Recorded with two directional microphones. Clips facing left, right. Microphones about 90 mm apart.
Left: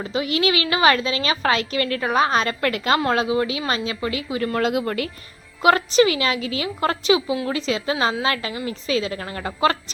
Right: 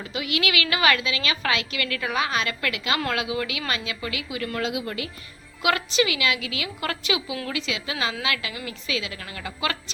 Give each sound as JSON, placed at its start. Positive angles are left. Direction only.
{"t": 0.0, "sound": "a woman's voice", "side_deg": 35}
{"t": 4.6, "sound": "speech", "side_deg": 50}
{"t": 5.6, "sound": "a woman's voice", "side_deg": 35}